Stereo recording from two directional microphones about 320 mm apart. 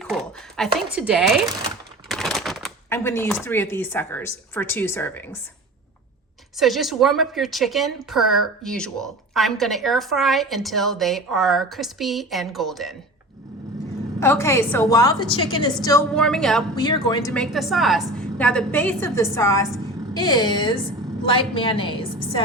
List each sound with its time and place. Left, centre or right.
0.0 s a woman's voice: centre
6.6 s speech: centre
14.2 s a woman's voice: centre
16.8 s a woman's voice: centre